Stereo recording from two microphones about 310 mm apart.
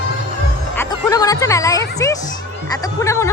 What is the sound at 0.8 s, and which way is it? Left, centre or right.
Music, centre.